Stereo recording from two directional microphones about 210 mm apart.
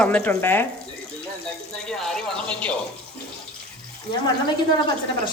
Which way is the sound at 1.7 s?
Centre (ahead or behind).